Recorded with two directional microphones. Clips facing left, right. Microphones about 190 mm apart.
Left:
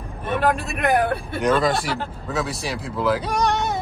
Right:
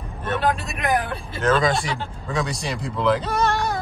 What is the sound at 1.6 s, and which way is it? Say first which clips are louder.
Speech: left 1 dB; centre (ahead or behind).